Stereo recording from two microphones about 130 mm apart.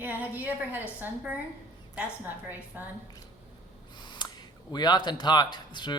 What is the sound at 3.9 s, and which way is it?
Speech, 35° left (ahead or behind).